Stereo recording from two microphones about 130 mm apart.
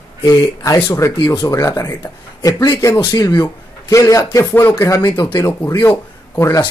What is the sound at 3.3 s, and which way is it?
Speech, 20° left (ahead or behind).